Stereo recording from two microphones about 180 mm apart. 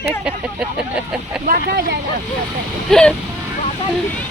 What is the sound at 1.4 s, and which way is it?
Speech, 60° right (ahead or behind).